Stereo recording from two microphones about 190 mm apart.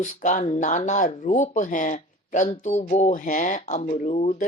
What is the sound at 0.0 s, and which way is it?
Speech, 40° left (ahead or behind).